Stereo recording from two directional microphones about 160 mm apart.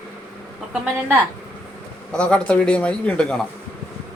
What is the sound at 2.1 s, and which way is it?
A man's voice, 5° left (ahead or behind).